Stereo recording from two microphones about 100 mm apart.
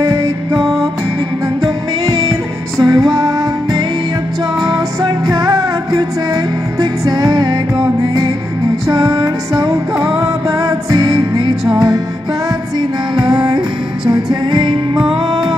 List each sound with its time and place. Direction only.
0.0 s music: 30° right (ahead or behind)
2.0 s music: 30° right (ahead or behind)
8.8 s music: 35° right (ahead or behind)
13.2 s music: 45° right (ahead or behind)